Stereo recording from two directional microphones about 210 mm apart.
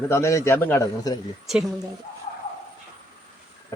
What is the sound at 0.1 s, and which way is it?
A man's voice, 15° left (ahead or behind).